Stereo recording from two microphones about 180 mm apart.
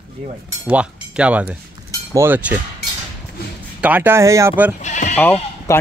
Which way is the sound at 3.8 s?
10° right (ahead or behind).